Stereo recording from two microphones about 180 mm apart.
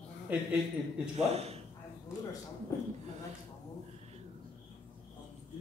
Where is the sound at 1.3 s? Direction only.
35° right (ahead or behind).